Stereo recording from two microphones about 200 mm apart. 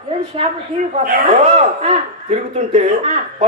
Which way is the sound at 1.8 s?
35° right (ahead or behind).